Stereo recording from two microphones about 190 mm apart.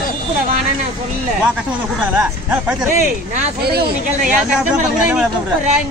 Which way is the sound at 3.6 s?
55° right (ahead or behind).